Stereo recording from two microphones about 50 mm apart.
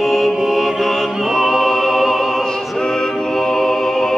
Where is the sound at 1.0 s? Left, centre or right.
Centre.